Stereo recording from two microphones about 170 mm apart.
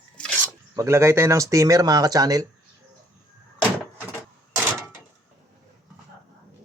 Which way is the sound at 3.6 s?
10° right (ahead or behind).